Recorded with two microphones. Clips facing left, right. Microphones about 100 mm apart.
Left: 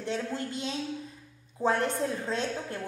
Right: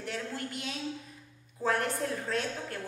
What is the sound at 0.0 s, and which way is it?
A woman's voice, 25° left (ahead or behind).